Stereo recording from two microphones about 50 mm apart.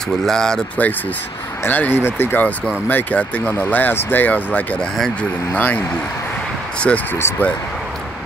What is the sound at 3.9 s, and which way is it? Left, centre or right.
Speech, left.